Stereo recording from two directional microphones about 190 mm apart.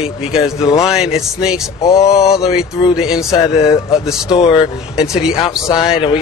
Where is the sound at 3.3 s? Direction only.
20° left (ahead or behind).